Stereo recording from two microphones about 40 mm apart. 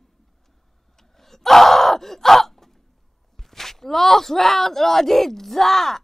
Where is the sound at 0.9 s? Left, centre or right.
Centre.